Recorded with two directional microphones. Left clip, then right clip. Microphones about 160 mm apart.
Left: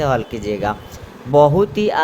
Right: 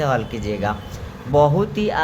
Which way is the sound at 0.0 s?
30° left (ahead or behind).